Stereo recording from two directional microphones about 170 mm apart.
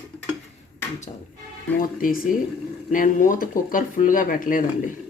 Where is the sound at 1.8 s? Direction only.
55° left (ahead or behind).